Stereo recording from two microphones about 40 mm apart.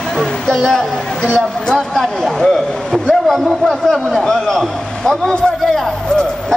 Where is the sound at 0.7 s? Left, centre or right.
Centre.